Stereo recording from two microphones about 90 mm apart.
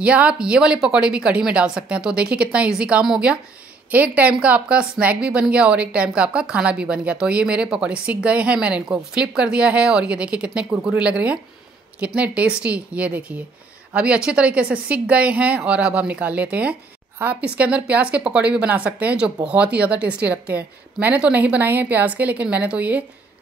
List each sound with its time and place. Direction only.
0.0 s speech: 15° right (ahead or behind)